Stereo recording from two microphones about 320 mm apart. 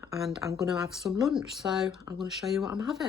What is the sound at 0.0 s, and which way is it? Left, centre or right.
Speech, centre.